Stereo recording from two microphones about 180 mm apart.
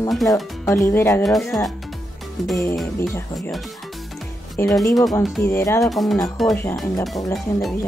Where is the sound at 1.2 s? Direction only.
Centre (ahead or behind).